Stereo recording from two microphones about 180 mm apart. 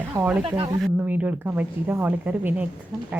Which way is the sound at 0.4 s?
30° right (ahead or behind).